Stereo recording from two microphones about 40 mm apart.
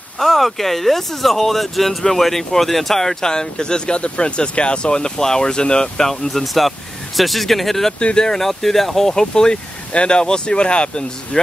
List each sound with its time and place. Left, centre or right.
0.2 s speech: centre
8.0 s speech: left
8.4 s speech: centre; by 11.1 s left